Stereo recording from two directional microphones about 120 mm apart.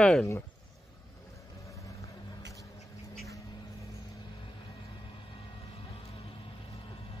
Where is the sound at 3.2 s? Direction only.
25° left (ahead or behind).